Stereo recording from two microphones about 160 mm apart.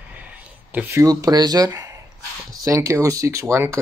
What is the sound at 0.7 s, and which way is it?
Speech, 15° right (ahead or behind).